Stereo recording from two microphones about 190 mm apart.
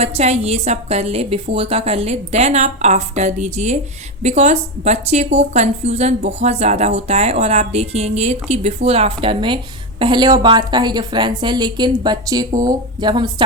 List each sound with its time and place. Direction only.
0.0 s a woman's voice: 35° right (ahead or behind)